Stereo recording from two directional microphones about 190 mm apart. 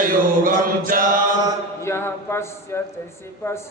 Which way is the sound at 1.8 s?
15° left (ahead or behind).